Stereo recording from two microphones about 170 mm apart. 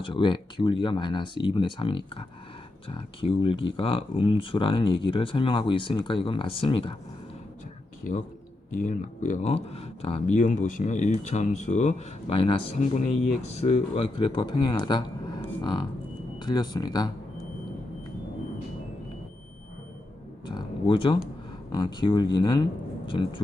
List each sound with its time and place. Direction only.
0.0 s speech: 30° left (ahead or behind)
8.0 s speech: 50° left (ahead or behind); by 17.1 s 25° left (ahead or behind)
20.5 s a sound: 25° left (ahead or behind)
21.7 s speech: 25° left (ahead or behind)